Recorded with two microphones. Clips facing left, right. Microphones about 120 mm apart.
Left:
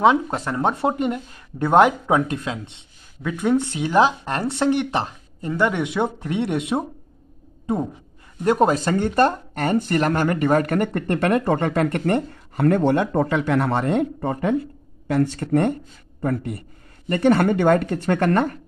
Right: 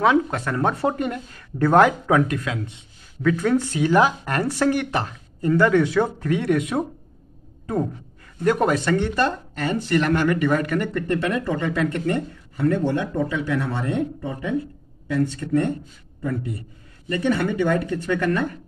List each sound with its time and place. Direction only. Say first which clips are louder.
0.0 s speech: left 1 dB; 25° left (ahead or behind)
3.2 s speech: right 1 dB; 15° left (ahead or behind)
8.4 s speech: left 2 dB; 30° left (ahead or behind); by 15.7 s 65° left (ahead or behind)
16.2 s speech: left 3 dB; 50° left (ahead or behind)